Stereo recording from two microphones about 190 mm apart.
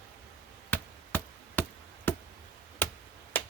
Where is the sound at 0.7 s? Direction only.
10° left (ahead or behind).